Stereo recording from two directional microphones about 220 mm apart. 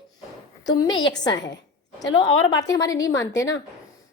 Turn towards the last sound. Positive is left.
turn(degrees=15)  # may be behind; listen again after turning